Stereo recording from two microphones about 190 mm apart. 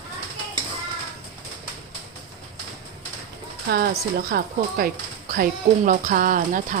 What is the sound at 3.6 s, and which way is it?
Speech, 55° right (ahead or behind).